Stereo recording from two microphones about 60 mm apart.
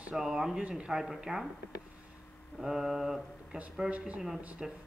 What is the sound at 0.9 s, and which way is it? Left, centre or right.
Speech, centre.